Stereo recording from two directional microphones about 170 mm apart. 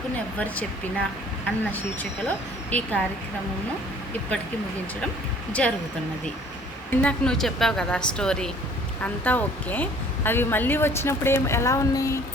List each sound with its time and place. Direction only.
0.3 s a woman's voice: 10° left (ahead or behind)
5.6 s a woman's voice: 5° left (ahead or behind)
7.0 s a woman's voice: 5° left (ahead or behind)